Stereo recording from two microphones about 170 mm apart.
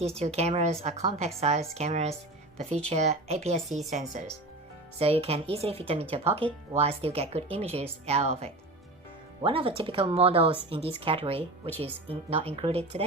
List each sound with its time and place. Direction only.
0.0 s a woman's voice: 40° right (ahead or behind)
4.9 s a woman's voice: 35° right (ahead or behind)